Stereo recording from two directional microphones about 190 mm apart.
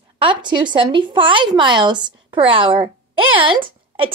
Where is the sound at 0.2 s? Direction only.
25° right (ahead or behind).